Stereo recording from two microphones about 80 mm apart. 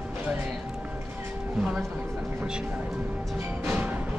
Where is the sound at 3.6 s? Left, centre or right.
Right.